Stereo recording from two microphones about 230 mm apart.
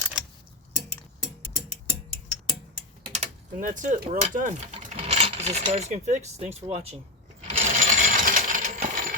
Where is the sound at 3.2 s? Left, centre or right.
Right.